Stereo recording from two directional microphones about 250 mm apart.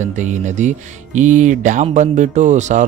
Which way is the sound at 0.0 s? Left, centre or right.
Right.